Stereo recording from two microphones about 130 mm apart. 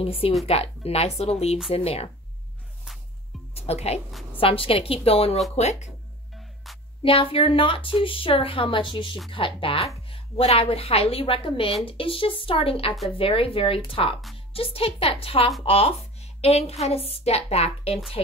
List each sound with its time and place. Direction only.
0.0 s a woman's voice: 45° left (ahead or behind)
3.5 s a woman's voice: 50° left (ahead or behind)
5.6 s speech: 60° left (ahead or behind)
6.3 s music: centre (ahead or behind)
7.0 s a woman's voice: 45° left (ahead or behind)